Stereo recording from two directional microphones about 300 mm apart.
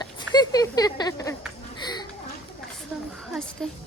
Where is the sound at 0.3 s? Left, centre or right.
Centre.